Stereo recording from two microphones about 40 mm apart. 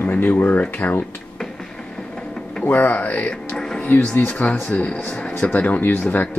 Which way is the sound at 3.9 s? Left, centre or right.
Left.